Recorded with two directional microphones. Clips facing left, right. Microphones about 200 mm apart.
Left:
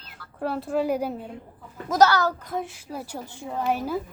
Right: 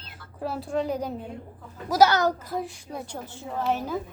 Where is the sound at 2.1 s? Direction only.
20° right (ahead or behind).